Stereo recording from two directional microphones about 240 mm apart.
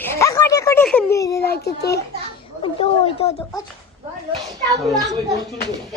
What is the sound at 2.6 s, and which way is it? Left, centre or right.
Speech, left.